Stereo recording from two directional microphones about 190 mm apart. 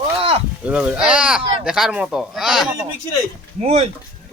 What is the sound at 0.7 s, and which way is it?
Speech, 5° right (ahead or behind).